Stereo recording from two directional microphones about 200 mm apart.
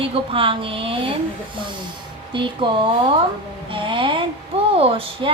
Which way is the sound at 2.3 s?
25° right (ahead or behind).